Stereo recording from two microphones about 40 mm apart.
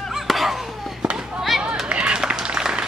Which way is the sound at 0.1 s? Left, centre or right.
Centre.